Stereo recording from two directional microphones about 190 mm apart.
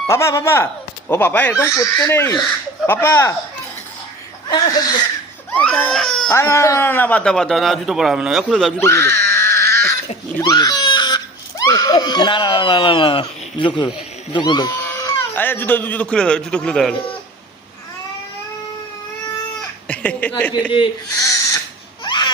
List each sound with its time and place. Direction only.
0.1 s speech: 15° left (ahead or behind)
4.4 s speech: 20° left (ahead or behind)
5.5 s speech: 5° left (ahead or behind)
6.3 s speech: 15° left (ahead or behind)
8.8 s a sound: 15° left (ahead or behind)
10.5 s crying: 20° left (ahead or behind)
14.3 s a man's voice: 25° left (ahead or behind); by 16.9 s 5° left (ahead or behind)
19.5 s a sound: 5° left (ahead or behind)
20.7 s owl: 20° left (ahead or behind)
22.0 s baby cry: 25° left (ahead or behind)